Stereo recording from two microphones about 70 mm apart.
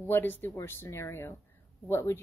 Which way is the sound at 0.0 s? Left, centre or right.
Left.